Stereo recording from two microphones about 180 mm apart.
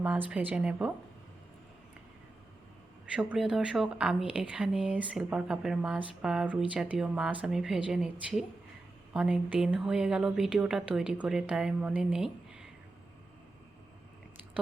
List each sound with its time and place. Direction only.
0.0 s a woman's voice: 5° right (ahead or behind)
3.1 s speech: 5° right (ahead or behind)